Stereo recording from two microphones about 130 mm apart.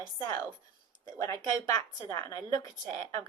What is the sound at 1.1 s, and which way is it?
Speech, 25° left (ahead or behind).